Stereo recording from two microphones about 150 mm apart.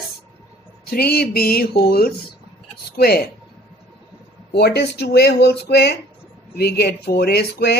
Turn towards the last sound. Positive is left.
turn(degrees=90)